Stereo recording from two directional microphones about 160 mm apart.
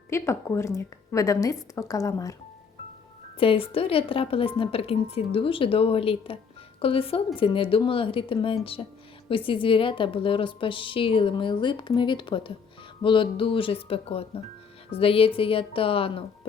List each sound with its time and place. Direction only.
0.1 s a woman's voice: 15° left (ahead or behind)
3.3 s a woman's voice: 35° left (ahead or behind)